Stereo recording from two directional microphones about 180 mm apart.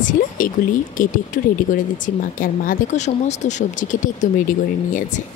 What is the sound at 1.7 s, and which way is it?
Speech, 50° left (ahead or behind).